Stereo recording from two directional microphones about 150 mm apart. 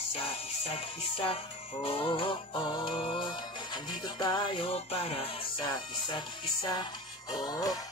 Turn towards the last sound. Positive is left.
turn(degrees=25)  # may be behind; listen again after turning